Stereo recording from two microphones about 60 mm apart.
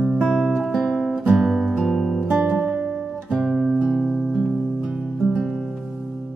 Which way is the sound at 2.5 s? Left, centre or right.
Centre.